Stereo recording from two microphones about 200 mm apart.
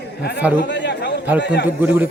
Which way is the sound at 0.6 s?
60° left (ahead or behind).